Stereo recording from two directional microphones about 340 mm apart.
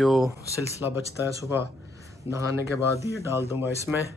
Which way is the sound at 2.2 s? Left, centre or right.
Centre.